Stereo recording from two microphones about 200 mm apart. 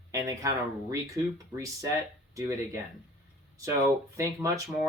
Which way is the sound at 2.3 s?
15° right (ahead or behind).